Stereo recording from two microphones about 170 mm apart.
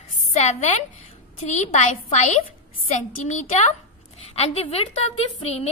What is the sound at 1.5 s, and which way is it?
A woman's voice, 45° left (ahead or behind).